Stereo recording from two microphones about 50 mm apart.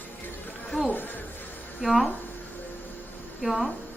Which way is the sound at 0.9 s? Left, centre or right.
Left.